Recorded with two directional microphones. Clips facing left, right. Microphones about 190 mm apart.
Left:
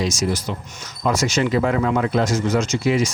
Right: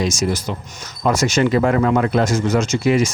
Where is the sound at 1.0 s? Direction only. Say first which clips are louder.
Right 3 dB; 55° right (ahead or behind).